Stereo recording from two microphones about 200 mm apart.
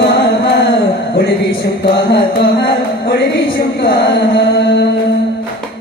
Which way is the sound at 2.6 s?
50° left (ahead or behind).